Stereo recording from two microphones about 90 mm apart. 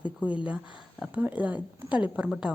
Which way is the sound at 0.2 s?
15° right (ahead or behind).